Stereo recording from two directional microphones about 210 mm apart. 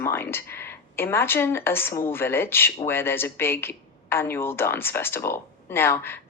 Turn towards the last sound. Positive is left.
turn(degrees=10)  # may be behind; listen again after turning